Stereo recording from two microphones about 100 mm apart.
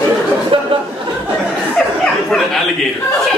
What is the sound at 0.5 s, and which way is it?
Chatter, 65° right (ahead or behind).